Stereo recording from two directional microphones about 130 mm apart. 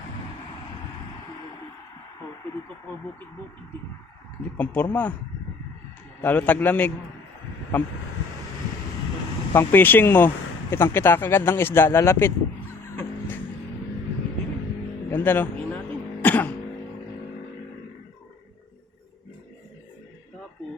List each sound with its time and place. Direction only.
4.5 s speech: 10° left (ahead or behind)
6.2 s speech: 10° left (ahead or behind)
9.6 s speech: 15° left (ahead or behind)
13.0 s music: 15° left (ahead or behind)
15.1 s a man's voice: 15° left (ahead or behind)
16.2 s throat clearing: 15° left (ahead or behind)